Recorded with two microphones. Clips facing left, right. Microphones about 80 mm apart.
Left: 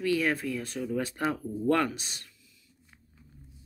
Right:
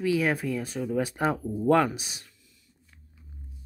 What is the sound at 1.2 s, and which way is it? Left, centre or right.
Speech, right.